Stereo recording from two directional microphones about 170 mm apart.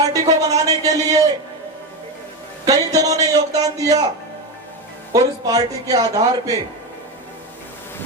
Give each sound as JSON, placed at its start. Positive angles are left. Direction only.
{"t": 0.1, "sound": "a sound", "side_deg": -20}
{"t": 2.6, "sound": "speech", "side_deg": -20}
{"t": 5.1, "sound": "speech", "side_deg": -20}